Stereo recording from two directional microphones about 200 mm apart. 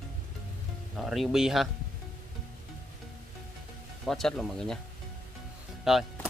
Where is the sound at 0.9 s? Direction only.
Centre (ahead or behind).